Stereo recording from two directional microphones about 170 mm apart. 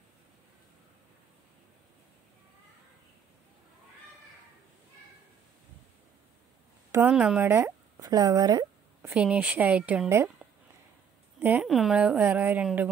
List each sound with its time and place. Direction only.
6.9 s speech: 10° right (ahead or behind)
9.0 s speech: 10° right (ahead or behind)